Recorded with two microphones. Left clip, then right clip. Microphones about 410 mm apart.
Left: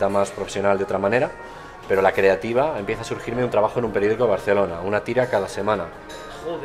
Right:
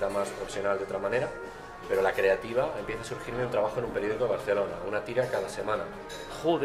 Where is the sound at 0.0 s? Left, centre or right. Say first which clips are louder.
Left 9 dB; left.